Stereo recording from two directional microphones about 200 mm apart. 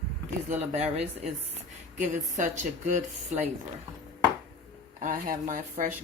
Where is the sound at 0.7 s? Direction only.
35° right (ahead or behind).